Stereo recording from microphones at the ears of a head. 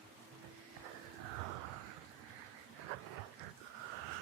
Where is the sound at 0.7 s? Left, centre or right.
Right.